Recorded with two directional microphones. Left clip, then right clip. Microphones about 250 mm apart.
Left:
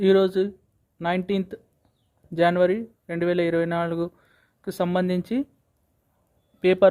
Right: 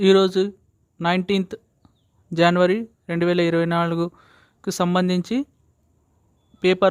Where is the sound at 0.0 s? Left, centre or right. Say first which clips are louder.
Right 3 dB; centre.